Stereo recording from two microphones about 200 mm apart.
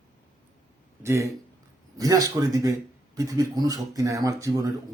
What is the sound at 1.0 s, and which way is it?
Speech, 15° right (ahead or behind).